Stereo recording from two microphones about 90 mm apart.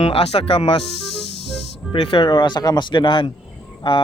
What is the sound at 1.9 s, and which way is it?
Speech, 75° left (ahead or behind).